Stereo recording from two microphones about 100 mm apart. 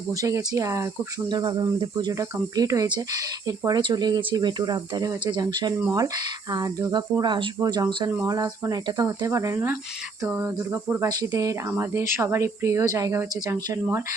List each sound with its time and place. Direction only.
0.1 s speech: 35° right (ahead or behind)
1.3 s speech: 45° right (ahead or behind)
2.1 s speech: 35° right (ahead or behind)
3.7 s speech: 50° right (ahead or behind)
7.6 s speech: 40° right (ahead or behind)
10.2 s cricket: 20° right (ahead or behind)
11.2 s speech: 35° right (ahead or behind)